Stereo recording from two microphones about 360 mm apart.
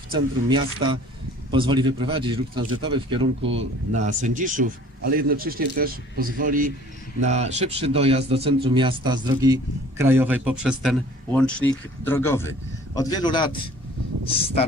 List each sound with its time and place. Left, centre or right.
0.1 s a man's voice: centre